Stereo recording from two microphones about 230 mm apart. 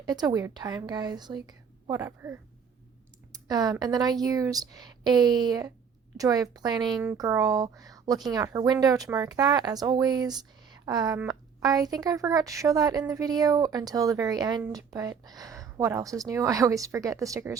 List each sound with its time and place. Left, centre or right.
0.0 s speech: centre